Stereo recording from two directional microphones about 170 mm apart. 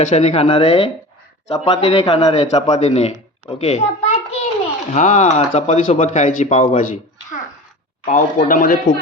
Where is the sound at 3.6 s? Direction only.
40° left (ahead or behind).